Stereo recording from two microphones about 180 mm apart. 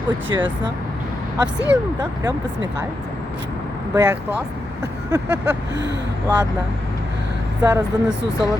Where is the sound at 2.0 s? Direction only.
20° right (ahead or behind).